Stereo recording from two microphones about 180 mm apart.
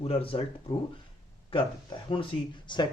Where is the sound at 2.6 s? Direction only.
25° left (ahead or behind).